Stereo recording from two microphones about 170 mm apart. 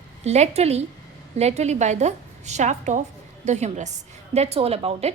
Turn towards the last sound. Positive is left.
turn(degrees=-35)  # may be behind; listen again after turning